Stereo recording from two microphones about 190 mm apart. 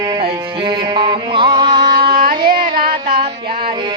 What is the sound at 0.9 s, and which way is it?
Music, 25° right (ahead or behind).